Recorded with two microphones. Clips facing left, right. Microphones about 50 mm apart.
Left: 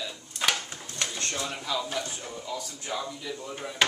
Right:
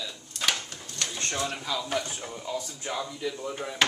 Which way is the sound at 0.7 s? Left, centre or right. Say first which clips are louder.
Left 1 dB; centre.